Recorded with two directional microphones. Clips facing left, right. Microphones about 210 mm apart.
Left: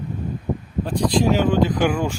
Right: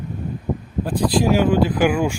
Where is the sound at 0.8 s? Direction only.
5° right (ahead or behind).